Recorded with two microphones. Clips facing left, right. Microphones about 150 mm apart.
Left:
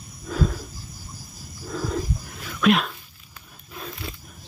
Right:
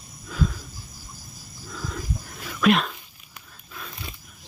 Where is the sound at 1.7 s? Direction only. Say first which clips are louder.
Left 7 dB; 45° left (ahead or behind).